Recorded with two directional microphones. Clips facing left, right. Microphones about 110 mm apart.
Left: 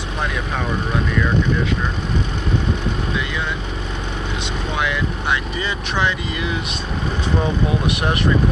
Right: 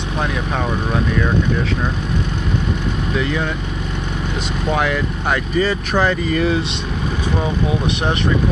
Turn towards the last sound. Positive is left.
turn(degrees=-40)  # may be behind; listen again after turning